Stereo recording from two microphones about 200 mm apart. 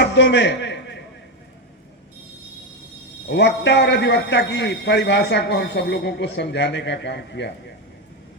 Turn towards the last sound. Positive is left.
turn(degrees=60)  # may be behind; listen again after turning